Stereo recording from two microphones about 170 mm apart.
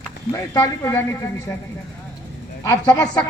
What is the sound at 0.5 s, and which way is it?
Speech, 20° left (ahead or behind).